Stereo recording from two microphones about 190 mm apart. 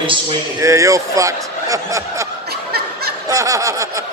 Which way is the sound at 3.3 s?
15° right (ahead or behind).